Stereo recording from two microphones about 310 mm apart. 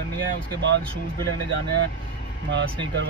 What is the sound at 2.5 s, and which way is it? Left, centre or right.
Speech, right.